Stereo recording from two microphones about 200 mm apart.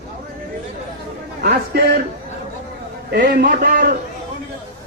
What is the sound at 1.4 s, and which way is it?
Speech, 50° right (ahead or behind).